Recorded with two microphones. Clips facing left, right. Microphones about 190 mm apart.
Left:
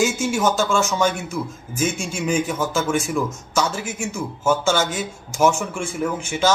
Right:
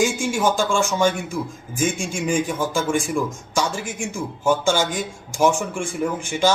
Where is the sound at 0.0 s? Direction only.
10° right (ahead or behind).